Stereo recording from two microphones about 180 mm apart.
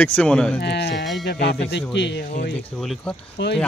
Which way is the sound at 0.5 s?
65° left (ahead or behind).